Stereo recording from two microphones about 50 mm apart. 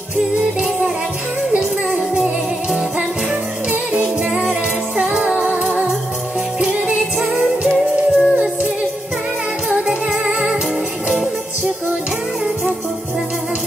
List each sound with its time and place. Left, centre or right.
4.0 s music: right
7.6 s music: centre
9.7 s music: centre